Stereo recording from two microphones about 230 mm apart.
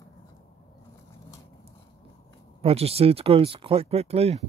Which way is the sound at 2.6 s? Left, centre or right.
Right.